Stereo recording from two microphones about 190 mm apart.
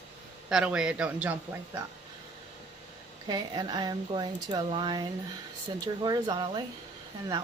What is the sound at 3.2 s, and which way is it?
Speech, 20° right (ahead or behind).